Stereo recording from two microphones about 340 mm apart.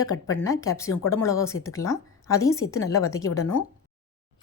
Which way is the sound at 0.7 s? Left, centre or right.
Centre.